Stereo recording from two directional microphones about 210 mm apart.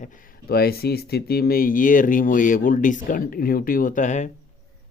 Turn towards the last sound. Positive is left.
turn(degrees=35)  # may be behind; listen again after turning